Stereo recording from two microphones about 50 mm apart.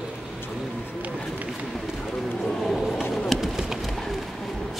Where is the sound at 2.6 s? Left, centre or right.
Centre.